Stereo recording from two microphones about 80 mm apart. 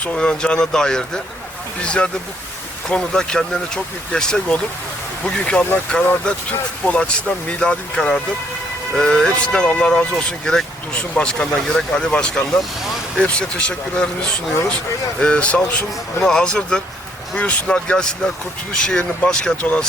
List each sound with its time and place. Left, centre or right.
0.0 s speech: centre